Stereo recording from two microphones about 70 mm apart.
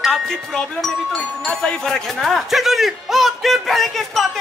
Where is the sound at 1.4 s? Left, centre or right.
Centre.